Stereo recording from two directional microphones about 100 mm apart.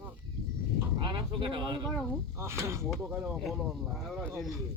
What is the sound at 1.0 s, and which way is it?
Speech, 50° right (ahead or behind).